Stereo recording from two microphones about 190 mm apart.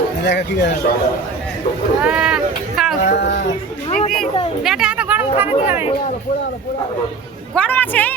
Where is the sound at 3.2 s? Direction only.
70° left (ahead or behind).